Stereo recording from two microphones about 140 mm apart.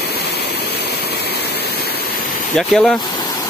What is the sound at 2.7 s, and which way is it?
Speech, 5° left (ahead or behind).